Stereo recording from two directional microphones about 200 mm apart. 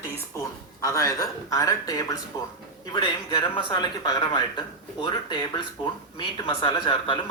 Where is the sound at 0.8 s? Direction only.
15° left (ahead or behind).